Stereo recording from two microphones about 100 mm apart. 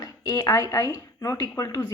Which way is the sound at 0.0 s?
35° left (ahead or behind).